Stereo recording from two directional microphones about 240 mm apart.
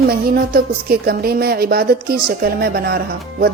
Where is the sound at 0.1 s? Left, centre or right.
Right.